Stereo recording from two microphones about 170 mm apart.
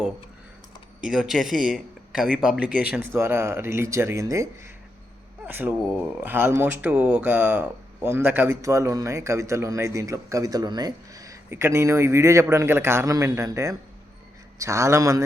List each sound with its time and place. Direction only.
1.0 s speech: centre (ahead or behind); by 4.4 s 20° right (ahead or behind)
5.5 s speech: 10° right (ahead or behind)